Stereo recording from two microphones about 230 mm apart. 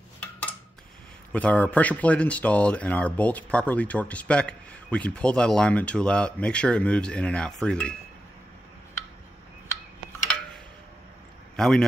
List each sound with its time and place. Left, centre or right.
1.3 s speech: centre
11.5 s a man's voice: centre